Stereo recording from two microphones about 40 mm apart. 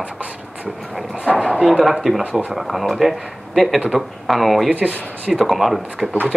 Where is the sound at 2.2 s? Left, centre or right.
Right.